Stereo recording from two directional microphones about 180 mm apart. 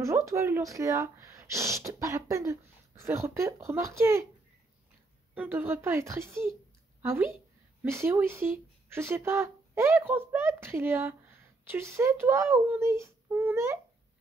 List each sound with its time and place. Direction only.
0.0 s speech: 15° right (ahead or behind)
5.3 s a woman's voice: 10° right (ahead or behind)